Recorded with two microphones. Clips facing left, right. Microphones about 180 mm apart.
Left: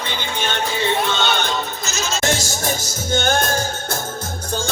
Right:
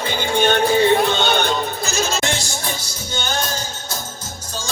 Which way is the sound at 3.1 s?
50° left (ahead or behind).